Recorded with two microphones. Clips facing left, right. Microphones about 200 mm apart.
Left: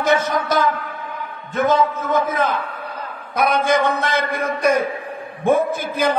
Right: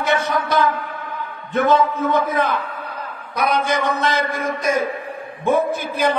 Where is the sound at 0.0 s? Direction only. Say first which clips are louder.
Left 3 dB; 40° left (ahead or behind).